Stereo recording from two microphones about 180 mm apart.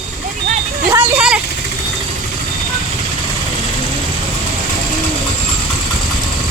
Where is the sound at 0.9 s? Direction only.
10° right (ahead or behind).